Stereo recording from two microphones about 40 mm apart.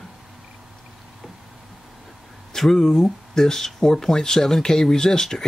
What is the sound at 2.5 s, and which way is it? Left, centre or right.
Speech, centre.